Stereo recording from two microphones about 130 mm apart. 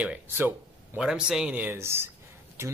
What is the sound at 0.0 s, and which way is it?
A man's voice, 10° right (ahead or behind).